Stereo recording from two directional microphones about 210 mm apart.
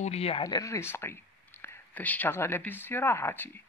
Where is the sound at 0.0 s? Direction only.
30° left (ahead or behind).